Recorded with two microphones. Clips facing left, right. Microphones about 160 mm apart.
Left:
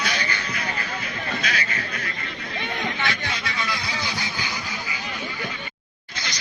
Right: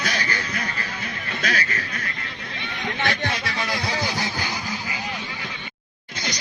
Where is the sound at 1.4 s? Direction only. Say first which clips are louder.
Right 6 dB; 45° right (ahead or behind).